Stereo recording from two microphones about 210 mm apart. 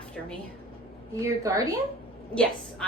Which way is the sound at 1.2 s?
15° right (ahead or behind).